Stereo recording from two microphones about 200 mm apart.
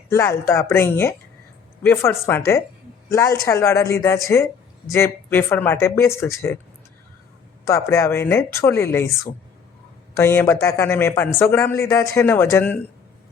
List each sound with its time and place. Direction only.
0.1 s a man's voice: 15° left (ahead or behind)
7.6 s a man's voice: 15° left (ahead or behind)